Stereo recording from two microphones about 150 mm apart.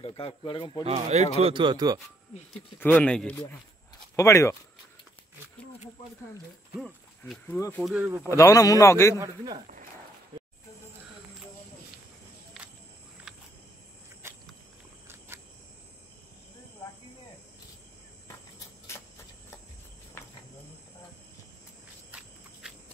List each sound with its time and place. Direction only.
0.0 s speech: 40° left (ahead or behind)
0.8 s speech: 45° right (ahead or behind); by 2.0 s 30° right (ahead or behind)
2.8 s speech: 10° left (ahead or behind)
4.2 s a man's voice: 20° left (ahead or behind)
7.4 s speech: 15° left (ahead or behind)
7.8 s speech: 10° right (ahead or behind)
8.2 s a man's voice: 20° left (ahead or behind)
9.1 s speech: 25° right (ahead or behind)
12.6 s walk: centre (ahead or behind)
15.0 s cricket: 15° right (ahead or behind)
22.6 s walk: 5° right (ahead or behind)